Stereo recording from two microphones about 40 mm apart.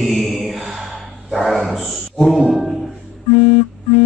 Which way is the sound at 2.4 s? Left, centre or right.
Centre.